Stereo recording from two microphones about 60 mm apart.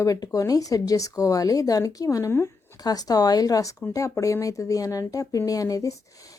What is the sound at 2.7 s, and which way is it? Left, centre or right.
Speech, left.